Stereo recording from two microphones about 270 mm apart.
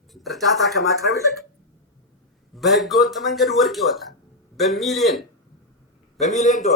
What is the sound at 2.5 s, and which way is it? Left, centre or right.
A man's voice, centre.